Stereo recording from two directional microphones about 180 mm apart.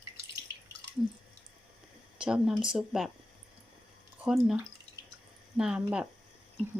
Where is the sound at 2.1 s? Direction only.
5° right (ahead or behind).